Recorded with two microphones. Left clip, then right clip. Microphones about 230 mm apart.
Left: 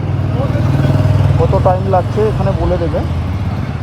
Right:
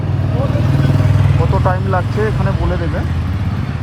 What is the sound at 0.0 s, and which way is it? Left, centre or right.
Vehicle, right.